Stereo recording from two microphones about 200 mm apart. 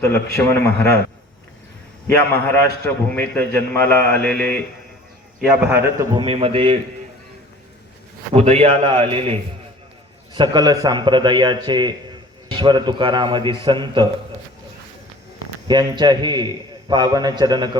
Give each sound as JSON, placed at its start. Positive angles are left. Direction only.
{"t": 0.3, "sound": "a man's voice", "side_deg": 15}
{"t": 2.0, "sound": "a man's voice", "side_deg": 10}
{"t": 5.6, "sound": "a man's voice", "side_deg": -10}
{"t": 6.2, "sound": "a man's voice", "side_deg": -30}
{"t": 8.3, "sound": "a man's voice", "side_deg": -30}
{"t": 15.6, "sound": "a man's voice", "side_deg": -20}